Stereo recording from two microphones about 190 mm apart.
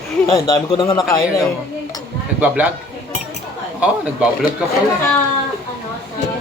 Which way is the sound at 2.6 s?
10° right (ahead or behind).